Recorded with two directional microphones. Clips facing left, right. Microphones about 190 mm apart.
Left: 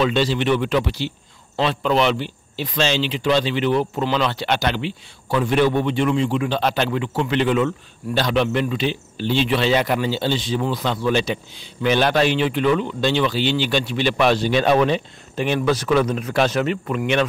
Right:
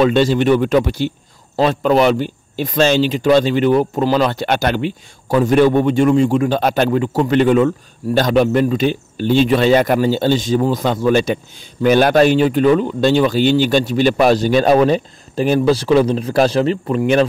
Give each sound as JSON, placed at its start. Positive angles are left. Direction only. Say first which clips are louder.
{"t": 0.0, "sound": "speech", "louder": "right 6 dB", "side_deg": -50}